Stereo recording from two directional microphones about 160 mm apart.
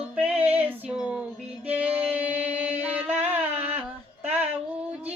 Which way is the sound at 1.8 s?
10° right (ahead or behind).